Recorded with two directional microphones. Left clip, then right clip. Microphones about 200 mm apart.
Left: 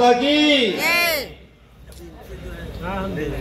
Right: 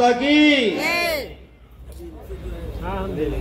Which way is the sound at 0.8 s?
10° right (ahead or behind).